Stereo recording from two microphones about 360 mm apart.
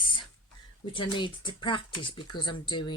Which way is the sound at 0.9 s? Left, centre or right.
Centre.